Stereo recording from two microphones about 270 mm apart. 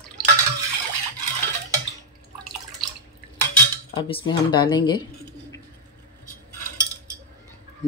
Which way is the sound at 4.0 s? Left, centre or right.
Centre.